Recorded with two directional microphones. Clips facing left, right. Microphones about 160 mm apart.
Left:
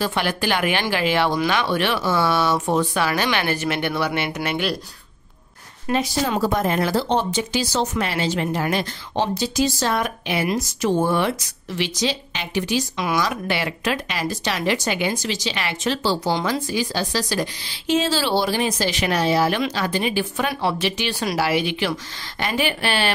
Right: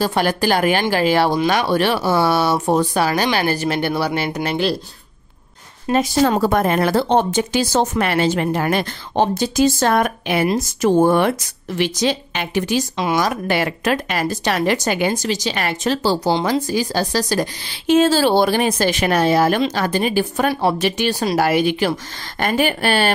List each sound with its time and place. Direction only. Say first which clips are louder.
0.0 s speech: right 5 dB; 40° right (ahead or behind)
5.9 s speech: right 6 dB; 50° right (ahead or behind)
12.9 s speech: right 4 dB; 25° right (ahead or behind)
13.2 s speech: right 4 dB; 45° right (ahead or behind)